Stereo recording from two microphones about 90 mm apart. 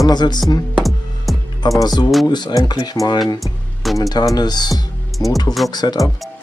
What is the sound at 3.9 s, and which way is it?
Speech, 40° left (ahead or behind).